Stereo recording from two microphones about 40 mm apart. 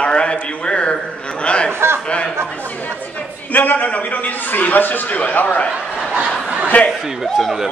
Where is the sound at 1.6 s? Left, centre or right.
Right.